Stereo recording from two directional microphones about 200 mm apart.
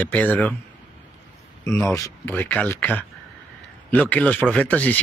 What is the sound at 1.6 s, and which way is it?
Speech, 15° left (ahead or behind).